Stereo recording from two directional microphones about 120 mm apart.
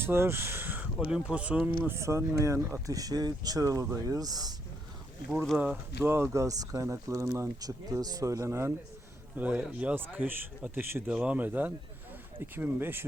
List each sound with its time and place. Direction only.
0.0 s speech: 20° right (ahead or behind)
1.8 s speech: 20° right (ahead or behind)
5.3 s speech: centre (ahead or behind)
5.5 s speech: 15° right (ahead or behind)